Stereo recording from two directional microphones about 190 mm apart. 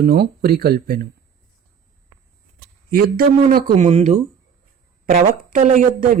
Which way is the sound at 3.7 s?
35° right (ahead or behind).